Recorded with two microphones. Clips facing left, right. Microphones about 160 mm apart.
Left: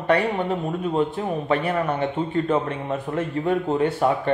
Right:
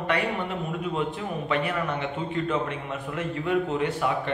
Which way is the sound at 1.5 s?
40° left (ahead or behind).